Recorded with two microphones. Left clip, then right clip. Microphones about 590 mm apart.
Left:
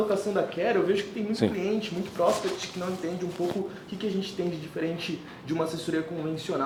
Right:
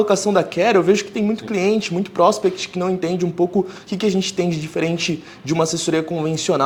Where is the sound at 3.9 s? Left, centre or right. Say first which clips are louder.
Right 12 dB; right.